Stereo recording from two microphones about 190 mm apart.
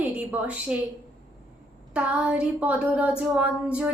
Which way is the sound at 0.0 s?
10° right (ahead or behind).